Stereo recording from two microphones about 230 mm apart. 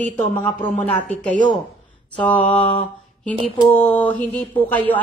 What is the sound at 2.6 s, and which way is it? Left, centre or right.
Mantra, left.